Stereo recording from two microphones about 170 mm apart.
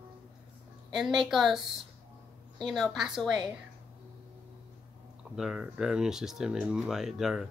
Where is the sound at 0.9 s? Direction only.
Centre (ahead or behind).